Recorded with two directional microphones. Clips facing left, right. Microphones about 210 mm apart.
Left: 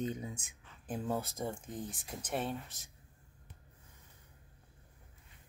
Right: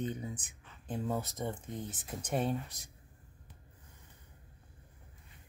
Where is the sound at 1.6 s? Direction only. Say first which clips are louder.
Right 1 dB; centre (ahead or behind).